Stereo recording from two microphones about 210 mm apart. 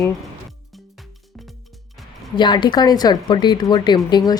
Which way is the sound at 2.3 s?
20° left (ahead or behind).